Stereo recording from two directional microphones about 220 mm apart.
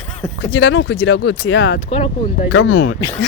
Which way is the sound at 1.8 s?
25° left (ahead or behind).